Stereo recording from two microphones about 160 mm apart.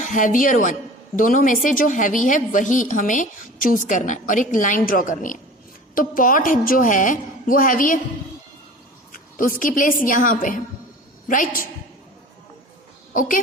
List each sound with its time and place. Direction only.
0.0 s a woman's voice: 55° left (ahead or behind)
9.1 s a woman's voice: 60° left (ahead or behind)
13.1 s a woman's voice: 55° left (ahead or behind)